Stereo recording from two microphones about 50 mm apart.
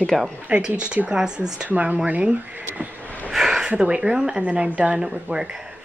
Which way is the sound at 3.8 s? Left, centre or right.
Right.